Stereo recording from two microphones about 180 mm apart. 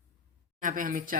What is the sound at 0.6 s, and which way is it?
Speech, 45° right (ahead or behind).